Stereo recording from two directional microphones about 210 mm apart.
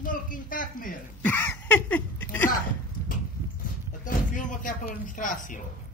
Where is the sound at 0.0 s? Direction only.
40° left (ahead or behind).